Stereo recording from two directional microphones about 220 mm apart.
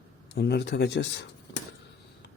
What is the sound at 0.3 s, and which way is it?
Speech, 50° left (ahead or behind).